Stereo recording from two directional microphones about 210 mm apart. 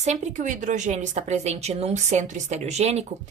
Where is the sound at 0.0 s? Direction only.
35° right (ahead or behind).